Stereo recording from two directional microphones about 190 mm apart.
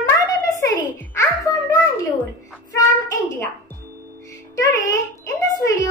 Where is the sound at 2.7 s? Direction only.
15° left (ahead or behind).